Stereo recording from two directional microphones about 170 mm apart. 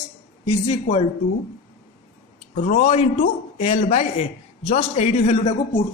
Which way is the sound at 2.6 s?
45° left (ahead or behind).